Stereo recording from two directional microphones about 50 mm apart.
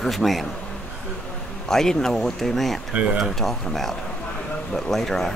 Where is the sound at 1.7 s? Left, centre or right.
Centre.